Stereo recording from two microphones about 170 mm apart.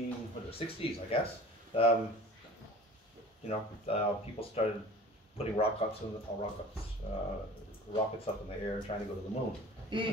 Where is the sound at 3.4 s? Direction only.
35° left (ahead or behind).